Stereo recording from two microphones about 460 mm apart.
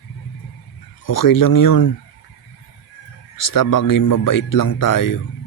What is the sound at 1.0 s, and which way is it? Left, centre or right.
Speech, left.